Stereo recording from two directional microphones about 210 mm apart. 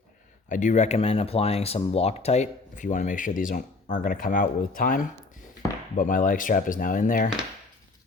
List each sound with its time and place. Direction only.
0.4 s speech: 35° left (ahead or behind)